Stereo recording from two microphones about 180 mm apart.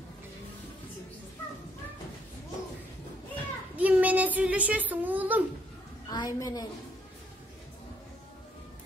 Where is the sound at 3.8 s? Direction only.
10° right (ahead or behind).